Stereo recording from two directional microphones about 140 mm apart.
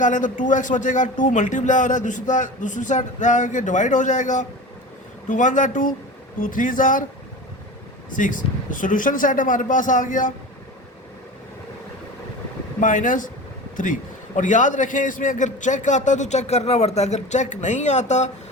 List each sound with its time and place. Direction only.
0.0 s a man's voice: 65° left (ahead or behind)
8.1 s speech: 70° left (ahead or behind)
12.8 s a man's voice: 70° left (ahead or behind)